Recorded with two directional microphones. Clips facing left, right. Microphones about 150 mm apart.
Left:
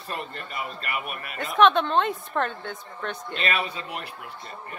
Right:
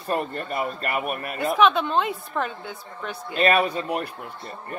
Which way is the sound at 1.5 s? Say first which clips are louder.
Left 1 dB; 5° right (ahead or behind).